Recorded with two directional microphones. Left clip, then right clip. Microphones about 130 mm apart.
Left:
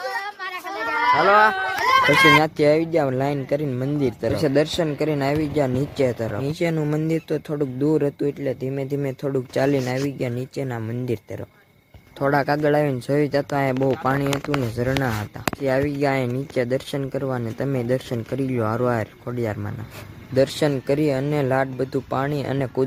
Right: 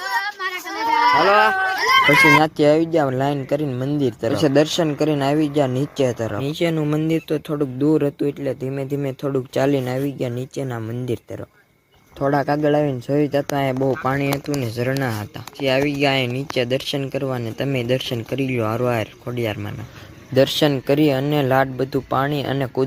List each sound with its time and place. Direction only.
0.4 s a sound: 5° left (ahead or behind)
1.3 s speech: 10° right (ahead or behind)
1.6 s run: 5° left (ahead or behind)
2.4 s speech: 15° right (ahead or behind)
12.2 s speech: 20° right (ahead or behind)
16.0 s speech: 10° right (ahead or behind)
20.3 s speech: 15° right (ahead or behind)